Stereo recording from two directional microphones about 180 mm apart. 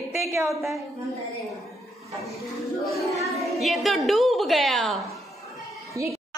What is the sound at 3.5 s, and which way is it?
A woman's voice, centre (ahead or behind).